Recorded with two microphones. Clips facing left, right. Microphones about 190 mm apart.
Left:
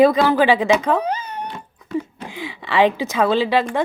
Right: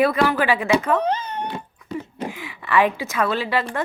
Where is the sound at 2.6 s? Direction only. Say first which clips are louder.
Left 2 dB; 90° left.